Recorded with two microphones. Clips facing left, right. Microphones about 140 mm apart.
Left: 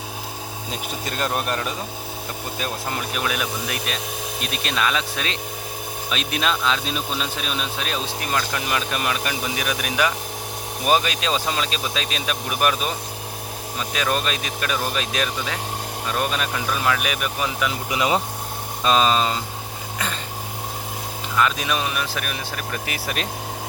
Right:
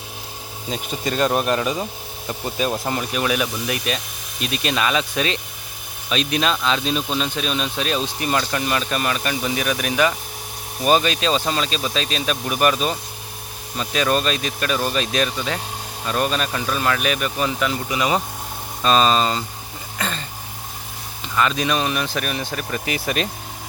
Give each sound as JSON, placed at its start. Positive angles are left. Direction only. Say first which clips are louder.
{"t": 0.7, "sound": "speech", "louder": "right 6 dB", "side_deg": 0}
{"t": 3.2, "sound": "speech", "louder": "right 4 dB", "side_deg": 0}
{"t": 13.9, "sound": "speech", "louder": "right 4 dB", "side_deg": 5}
{"t": 17.9, "sound": "speech", "louder": "even", "side_deg": 20}
{"t": 21.3, "sound": "speech", "louder": "right 2 dB", "side_deg": 5}